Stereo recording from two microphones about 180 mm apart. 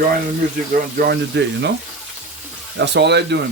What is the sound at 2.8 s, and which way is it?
Speech, 70° right (ahead or behind).